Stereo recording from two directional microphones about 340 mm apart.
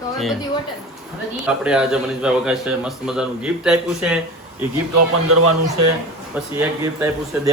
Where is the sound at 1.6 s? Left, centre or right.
Centre.